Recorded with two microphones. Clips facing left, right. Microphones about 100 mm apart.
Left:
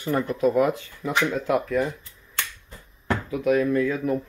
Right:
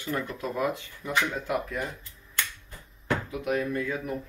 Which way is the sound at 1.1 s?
90° left.